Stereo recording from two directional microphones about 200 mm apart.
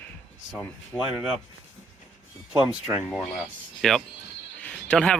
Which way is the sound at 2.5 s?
5° right (ahead or behind).